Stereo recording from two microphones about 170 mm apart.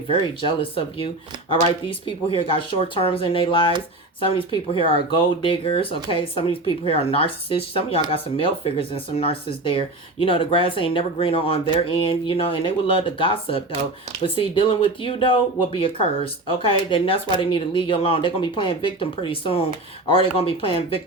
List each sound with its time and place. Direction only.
0.1 s speech: 30° left (ahead or behind)